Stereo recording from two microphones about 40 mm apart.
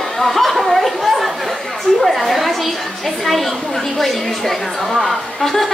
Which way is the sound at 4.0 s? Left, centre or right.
Centre.